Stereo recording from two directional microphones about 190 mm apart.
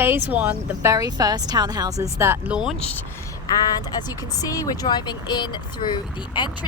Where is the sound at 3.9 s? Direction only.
20° left (ahead or behind).